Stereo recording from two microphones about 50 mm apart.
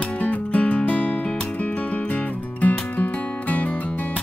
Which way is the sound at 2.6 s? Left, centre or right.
Left.